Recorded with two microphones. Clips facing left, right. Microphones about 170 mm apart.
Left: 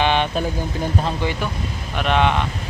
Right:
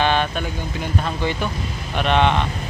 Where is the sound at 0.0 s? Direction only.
15° left (ahead or behind).